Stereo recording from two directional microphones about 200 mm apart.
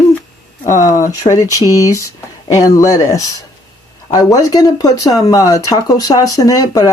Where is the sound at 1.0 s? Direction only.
15° left (ahead or behind).